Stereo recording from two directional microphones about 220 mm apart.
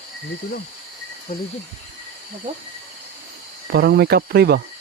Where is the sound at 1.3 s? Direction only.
30° left (ahead or behind).